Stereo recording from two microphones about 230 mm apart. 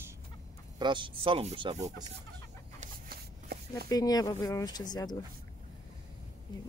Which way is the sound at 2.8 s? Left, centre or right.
Right.